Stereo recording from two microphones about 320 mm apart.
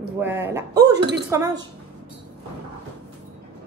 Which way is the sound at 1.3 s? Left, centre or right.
Centre.